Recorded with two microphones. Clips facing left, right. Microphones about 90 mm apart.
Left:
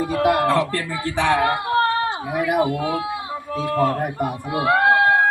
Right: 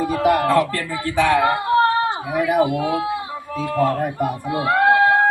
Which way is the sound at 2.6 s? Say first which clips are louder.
Right 2 dB; 5° right (ahead or behind).